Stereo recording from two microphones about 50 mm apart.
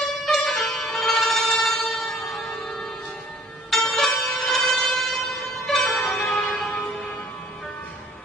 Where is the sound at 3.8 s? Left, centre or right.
Centre.